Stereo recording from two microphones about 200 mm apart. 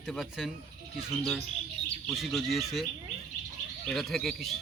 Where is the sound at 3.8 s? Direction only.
Centre (ahead or behind).